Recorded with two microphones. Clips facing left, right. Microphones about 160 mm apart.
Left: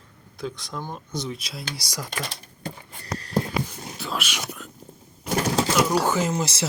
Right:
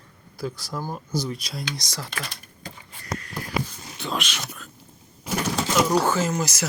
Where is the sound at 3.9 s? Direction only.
5° left (ahead or behind).